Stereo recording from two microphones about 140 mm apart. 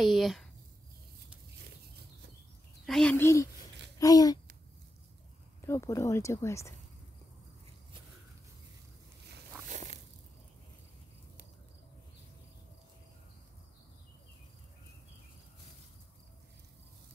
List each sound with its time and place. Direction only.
0.0 s speech: centre (ahead or behind)
2.9 s a woman's voice: 5° left (ahead or behind)
3.2 s a woman's voice: 20° left (ahead or behind)
5.6 s a woman's voice: 20° left (ahead or behind)
9.7 s biting: 60° right (ahead or behind)